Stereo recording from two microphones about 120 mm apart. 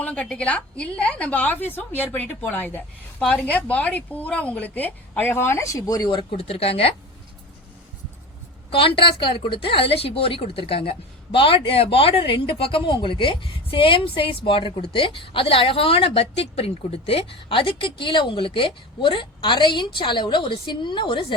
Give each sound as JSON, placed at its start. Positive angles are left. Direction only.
{"t": 0.0, "sound": "a woman's voice", "side_deg": 10}
{"t": 6.3, "sound": "speech", "side_deg": 55}
{"t": 8.7, "sound": "a woman's voice", "side_deg": 45}